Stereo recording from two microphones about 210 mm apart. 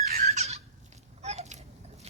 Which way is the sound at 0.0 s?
45° right (ahead or behind).